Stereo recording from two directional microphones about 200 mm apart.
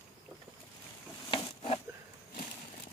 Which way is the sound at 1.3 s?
25° left (ahead or behind).